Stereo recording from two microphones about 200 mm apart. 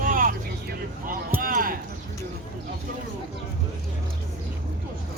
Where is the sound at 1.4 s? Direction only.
45° right (ahead or behind).